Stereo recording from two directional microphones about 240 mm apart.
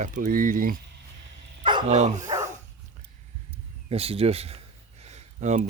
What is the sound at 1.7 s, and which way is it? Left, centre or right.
Speech, right.